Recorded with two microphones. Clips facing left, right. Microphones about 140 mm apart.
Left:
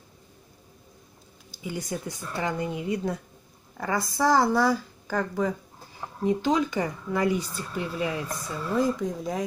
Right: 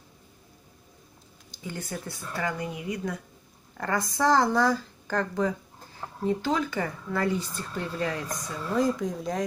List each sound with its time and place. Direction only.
1.5 s speech: 10° left (ahead or behind); by 3.2 s 30° left (ahead or behind)
3.7 s speech: 10° left (ahead or behind)